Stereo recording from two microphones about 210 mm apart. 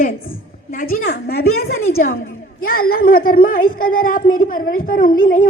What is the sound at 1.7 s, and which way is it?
Speech, 80° left.